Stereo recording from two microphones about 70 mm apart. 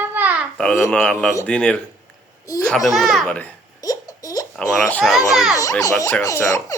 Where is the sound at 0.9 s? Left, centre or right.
Centre.